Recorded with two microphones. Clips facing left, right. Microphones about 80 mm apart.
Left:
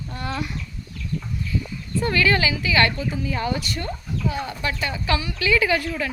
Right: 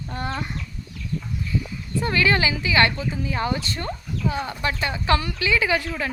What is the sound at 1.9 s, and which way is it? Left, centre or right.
Speech, right.